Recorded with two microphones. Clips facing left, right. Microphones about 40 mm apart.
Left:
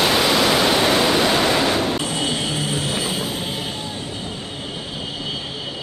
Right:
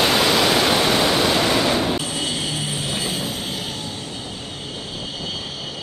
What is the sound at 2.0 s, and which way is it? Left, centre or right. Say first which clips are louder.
Vehicle: left 2 dB; centre.